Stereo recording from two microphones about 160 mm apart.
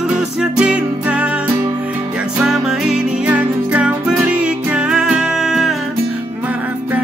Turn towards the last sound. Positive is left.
turn(degrees=0)  # may be behind; listen again after turning